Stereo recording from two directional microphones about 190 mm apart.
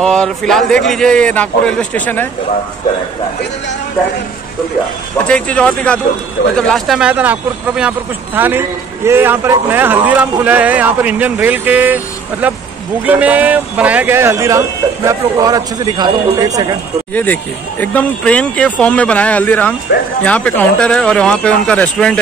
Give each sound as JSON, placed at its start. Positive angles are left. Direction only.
{"t": 0.0, "sound": "a man's voice", "side_deg": 5}
{"t": 5.2, "sound": "a man's voice", "side_deg": 5}
{"t": 17.1, "sound": "speech", "side_deg": 10}
{"t": 19.9, "sound": "speech", "side_deg": 60}
{"t": 20.2, "sound": "a man's voice", "side_deg": 5}